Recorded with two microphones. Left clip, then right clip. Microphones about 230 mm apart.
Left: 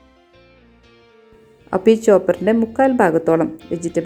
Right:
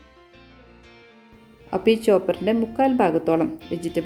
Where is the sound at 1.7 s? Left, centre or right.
Centre.